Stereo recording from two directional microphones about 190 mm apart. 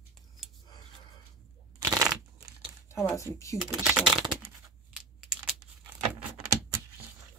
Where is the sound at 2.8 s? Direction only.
15° left (ahead or behind).